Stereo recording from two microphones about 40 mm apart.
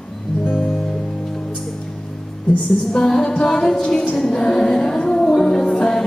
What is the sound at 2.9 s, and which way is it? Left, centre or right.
Music, centre.